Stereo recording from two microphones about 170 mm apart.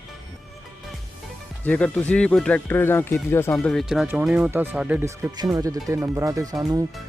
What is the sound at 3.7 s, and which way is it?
Speech, centre (ahead or behind).